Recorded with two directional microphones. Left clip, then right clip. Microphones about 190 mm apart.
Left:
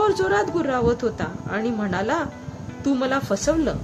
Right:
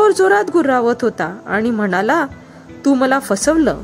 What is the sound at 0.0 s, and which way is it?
A woman's voice, 45° right (ahead or behind).